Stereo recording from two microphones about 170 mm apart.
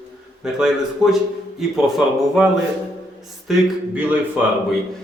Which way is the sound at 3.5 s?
10° right (ahead or behind).